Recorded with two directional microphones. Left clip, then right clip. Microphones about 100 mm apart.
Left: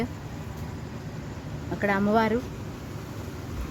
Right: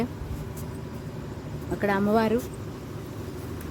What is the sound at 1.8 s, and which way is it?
Speech, 35° right (ahead or behind).